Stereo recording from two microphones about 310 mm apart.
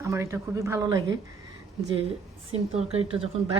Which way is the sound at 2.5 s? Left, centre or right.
Centre.